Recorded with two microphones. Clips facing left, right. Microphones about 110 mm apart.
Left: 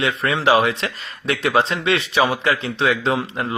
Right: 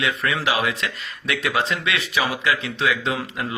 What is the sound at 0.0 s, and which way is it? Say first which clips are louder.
Speech: left 4 dB; 30° left (ahead or behind).